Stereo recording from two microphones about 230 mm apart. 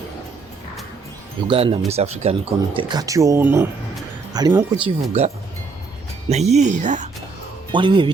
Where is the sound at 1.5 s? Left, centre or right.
Right.